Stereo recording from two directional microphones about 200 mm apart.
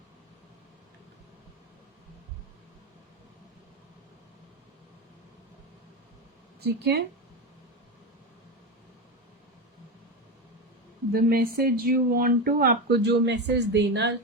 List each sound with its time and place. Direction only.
6.6 s speech: 55° right (ahead or behind)
11.1 s speech: 50° right (ahead or behind)